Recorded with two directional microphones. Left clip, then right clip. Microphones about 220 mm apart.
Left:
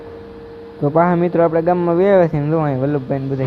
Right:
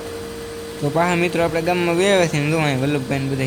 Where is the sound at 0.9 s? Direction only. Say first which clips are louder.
Left 4 dB; 5° left (ahead or behind).